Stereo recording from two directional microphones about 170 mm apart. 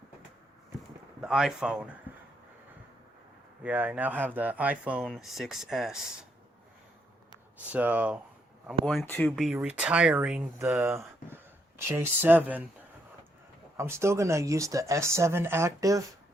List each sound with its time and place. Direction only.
1.2 s speech: 5° right (ahead or behind)
3.6 s speech: 10° right (ahead or behind)
7.7 s speech: 10° right (ahead or behind)
8.8 s speech: centre (ahead or behind)
9.5 s speech: 5° right (ahead or behind)
10.8 s speech: 15° right (ahead or behind)
13.7 s speech: 15° right (ahead or behind)